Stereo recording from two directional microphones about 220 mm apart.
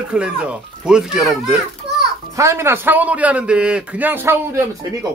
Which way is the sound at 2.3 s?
15° right (ahead or behind).